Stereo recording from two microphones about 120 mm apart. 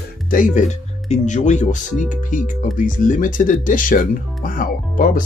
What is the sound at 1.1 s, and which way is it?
Speech, 85° left.